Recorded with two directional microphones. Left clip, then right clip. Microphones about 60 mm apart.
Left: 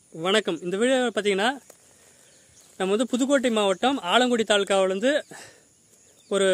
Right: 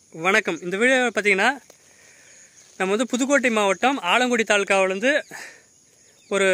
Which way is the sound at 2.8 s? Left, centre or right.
Right.